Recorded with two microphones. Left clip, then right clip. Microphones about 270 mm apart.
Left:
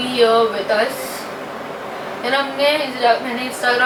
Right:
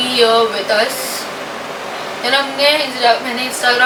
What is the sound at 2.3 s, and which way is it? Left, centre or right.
Speech, centre.